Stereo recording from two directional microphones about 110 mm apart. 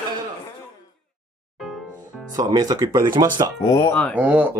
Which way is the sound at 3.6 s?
30° left (ahead or behind).